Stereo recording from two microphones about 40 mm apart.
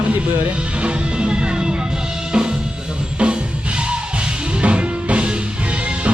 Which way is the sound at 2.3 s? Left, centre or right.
Right.